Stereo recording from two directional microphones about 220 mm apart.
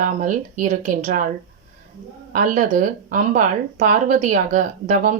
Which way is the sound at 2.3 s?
35° right (ahead or behind).